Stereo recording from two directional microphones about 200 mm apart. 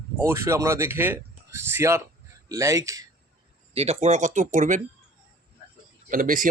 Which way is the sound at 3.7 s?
30° right (ahead or behind).